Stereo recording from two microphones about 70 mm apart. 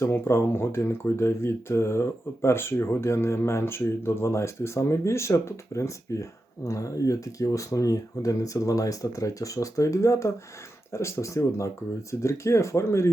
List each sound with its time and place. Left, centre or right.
0.0 s speech: left